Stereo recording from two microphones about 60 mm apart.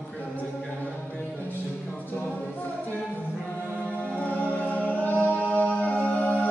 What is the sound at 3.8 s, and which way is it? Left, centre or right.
Music, left.